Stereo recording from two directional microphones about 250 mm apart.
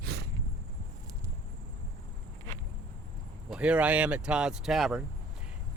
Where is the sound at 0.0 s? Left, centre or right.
Right.